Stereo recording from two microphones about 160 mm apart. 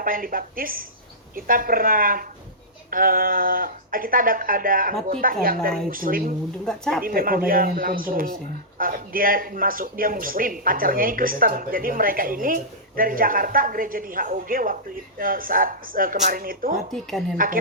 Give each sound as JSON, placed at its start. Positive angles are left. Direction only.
{"t": 0.0, "sound": "speech", "side_deg": -60}
{"t": 6.7, "sound": "speech", "side_deg": 5}
{"t": 7.0, "sound": "speech", "side_deg": -65}
{"t": 16.7, "sound": "speech", "side_deg": 0}
{"t": 17.3, "sound": "speech", "side_deg": -60}